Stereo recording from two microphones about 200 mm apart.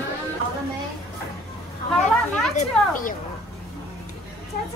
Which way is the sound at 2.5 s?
40° left (ahead or behind).